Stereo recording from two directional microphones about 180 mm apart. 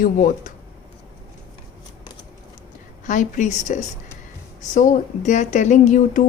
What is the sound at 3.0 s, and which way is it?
A woman's voice, 45° left (ahead or behind).